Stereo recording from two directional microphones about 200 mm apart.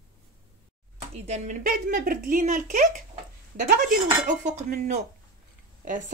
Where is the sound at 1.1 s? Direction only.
35° right (ahead or behind).